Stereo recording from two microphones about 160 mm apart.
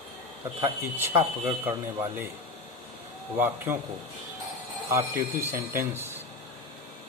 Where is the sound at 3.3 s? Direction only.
10° right (ahead or behind).